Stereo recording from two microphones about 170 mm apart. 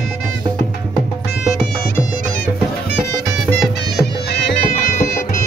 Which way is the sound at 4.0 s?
75° left (ahead or behind).